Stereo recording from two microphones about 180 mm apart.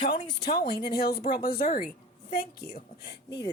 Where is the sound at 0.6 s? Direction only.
65° left (ahead or behind).